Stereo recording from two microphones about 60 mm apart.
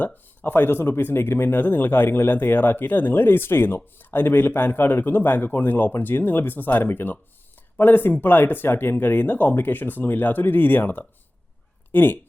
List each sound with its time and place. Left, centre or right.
0.0 s speech: left